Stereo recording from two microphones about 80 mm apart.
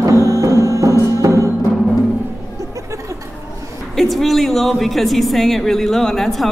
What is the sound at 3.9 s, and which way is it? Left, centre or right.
A woman's voice, centre.